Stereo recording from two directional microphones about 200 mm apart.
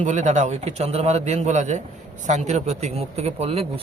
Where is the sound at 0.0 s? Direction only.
35° right (ahead or behind).